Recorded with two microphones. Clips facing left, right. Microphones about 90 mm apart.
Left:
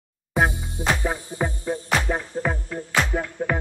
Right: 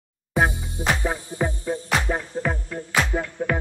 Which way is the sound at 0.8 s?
20° right (ahead or behind).